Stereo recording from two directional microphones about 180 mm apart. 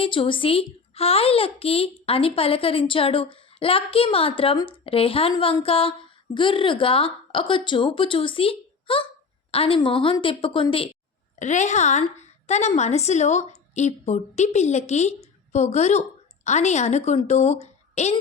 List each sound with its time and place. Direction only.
0.0 s a child's voice: 30° left (ahead or behind)
11.3 s a woman's voice: 40° left (ahead or behind)